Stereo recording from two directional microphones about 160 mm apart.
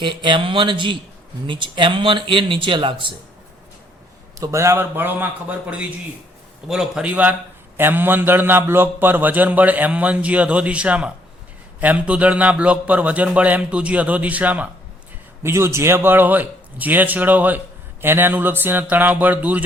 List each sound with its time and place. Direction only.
0.0 s speech: 30° right (ahead or behind)
4.4 s a man's voice: 15° right (ahead or behind)